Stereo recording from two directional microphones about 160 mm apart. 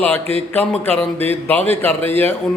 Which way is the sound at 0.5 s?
10° left (ahead or behind).